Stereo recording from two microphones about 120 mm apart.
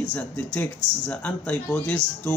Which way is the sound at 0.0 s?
15° left (ahead or behind).